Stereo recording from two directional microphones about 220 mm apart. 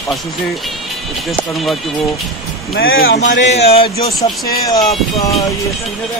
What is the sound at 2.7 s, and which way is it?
Speech, 45° left (ahead or behind).